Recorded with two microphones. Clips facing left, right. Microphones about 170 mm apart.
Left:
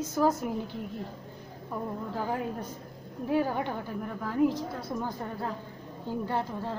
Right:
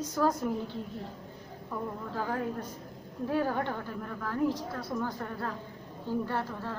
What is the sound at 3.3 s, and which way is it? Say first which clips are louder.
A woman's voice: left 2 dB; 15° left (ahead or behind).